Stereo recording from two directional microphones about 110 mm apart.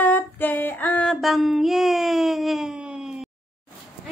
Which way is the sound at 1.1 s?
Centre (ahead or behind).